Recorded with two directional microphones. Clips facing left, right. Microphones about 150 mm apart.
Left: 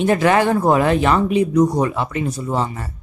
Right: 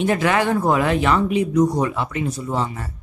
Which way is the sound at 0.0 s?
40° left (ahead or behind).